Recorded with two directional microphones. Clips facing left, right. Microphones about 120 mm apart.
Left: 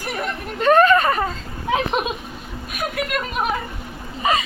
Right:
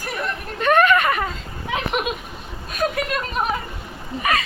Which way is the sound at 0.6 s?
35° left (ahead or behind).